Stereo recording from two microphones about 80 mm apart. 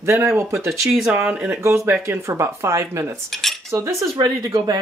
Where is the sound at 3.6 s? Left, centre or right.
Right.